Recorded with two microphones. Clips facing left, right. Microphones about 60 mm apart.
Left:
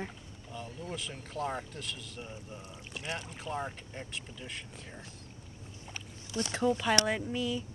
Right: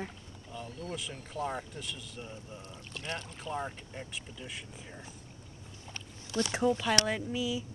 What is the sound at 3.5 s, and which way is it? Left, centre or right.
Speech, centre.